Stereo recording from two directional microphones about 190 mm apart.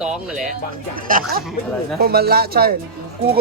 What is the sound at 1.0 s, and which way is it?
Speech, 50° right (ahead or behind).